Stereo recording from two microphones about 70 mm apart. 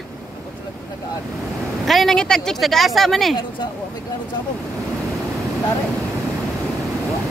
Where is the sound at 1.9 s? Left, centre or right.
Centre.